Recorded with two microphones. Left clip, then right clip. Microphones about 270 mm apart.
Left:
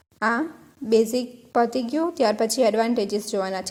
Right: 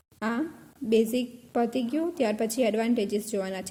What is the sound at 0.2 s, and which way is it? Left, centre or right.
A woman's voice, centre.